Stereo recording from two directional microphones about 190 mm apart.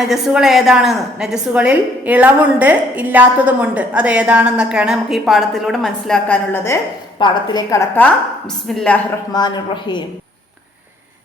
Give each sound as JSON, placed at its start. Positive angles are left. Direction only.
{"t": 0.0, "sound": "a woman's voice", "side_deg": 0}
{"t": 7.2, "sound": "a woman's voice", "side_deg": 25}
{"t": 9.3, "sound": "a woman's voice", "side_deg": 25}